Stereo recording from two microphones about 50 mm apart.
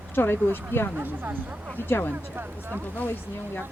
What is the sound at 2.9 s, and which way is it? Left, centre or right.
Speech, left.